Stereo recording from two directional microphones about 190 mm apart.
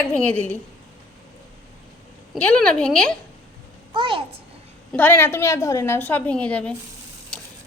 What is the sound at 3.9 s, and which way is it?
Speech, 25° right (ahead or behind).